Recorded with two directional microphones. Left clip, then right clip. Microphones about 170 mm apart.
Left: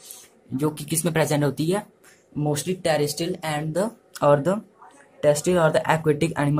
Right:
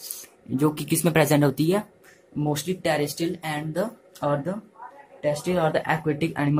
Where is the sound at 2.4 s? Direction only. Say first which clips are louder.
Left 1 dB; 10° left (ahead or behind).